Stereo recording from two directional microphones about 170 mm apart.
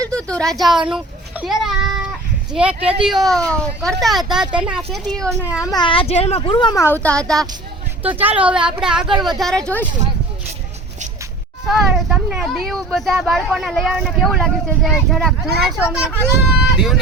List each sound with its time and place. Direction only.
0.0 s a sound: 5° left (ahead or behind)
2.5 s speech: 5° right (ahead or behind)
5.7 s speech: 30° left (ahead or behind)
6.7 s speech: 15° left (ahead or behind)
8.0 s speech: 10° right (ahead or behind); by 9.8 s 5° left (ahead or behind)
11.6 s speech: 5° right (ahead or behind)